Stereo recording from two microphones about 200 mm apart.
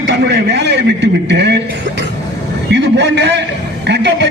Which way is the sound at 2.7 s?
60° right (ahead or behind).